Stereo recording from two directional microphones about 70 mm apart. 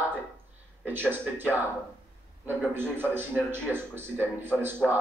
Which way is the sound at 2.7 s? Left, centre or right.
Right.